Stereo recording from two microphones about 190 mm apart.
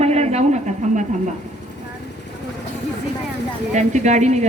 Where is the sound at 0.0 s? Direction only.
35° right (ahead or behind).